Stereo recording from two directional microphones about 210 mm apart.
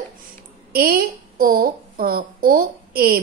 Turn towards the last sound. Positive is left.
turn(degrees=-45)  # may be behind; listen again after turning